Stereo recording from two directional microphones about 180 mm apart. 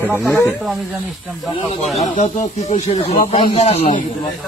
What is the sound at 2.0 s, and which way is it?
Speech, 40° left (ahead or behind).